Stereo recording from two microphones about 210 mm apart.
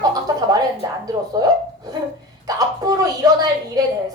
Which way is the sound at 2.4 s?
20° right (ahead or behind).